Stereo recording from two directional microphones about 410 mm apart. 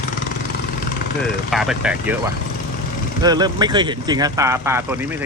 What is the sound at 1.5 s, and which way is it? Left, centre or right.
Speech, centre.